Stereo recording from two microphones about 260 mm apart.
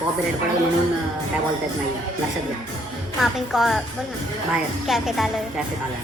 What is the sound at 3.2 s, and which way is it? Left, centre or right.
Speech, centre.